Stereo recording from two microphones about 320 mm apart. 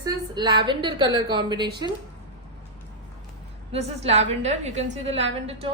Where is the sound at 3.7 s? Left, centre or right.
Centre.